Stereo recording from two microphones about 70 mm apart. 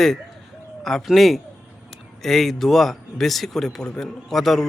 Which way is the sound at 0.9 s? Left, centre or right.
Centre.